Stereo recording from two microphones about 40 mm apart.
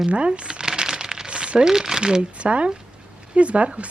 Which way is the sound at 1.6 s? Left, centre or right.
Centre.